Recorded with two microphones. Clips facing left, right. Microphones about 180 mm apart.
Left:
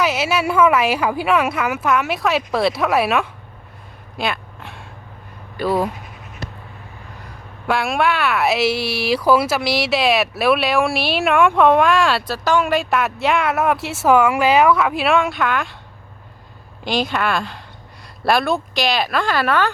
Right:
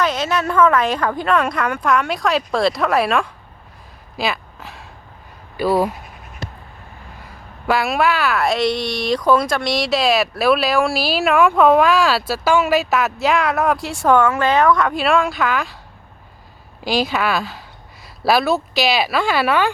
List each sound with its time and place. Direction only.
0.0 s speech: 10° left (ahead or behind)
4.2 s a sound: centre (ahead or behind)
5.5 s speech: 5° right (ahead or behind)
7.7 s speech: centre (ahead or behind)
16.8 s speech: 5° right (ahead or behind)